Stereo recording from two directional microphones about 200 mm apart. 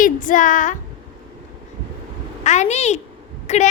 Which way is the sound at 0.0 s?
40° left (ahead or behind).